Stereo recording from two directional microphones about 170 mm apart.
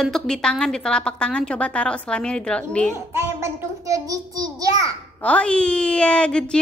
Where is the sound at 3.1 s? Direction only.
15° right (ahead or behind).